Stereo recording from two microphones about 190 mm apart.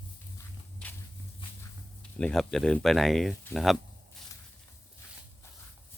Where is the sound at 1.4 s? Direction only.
25° left (ahead or behind).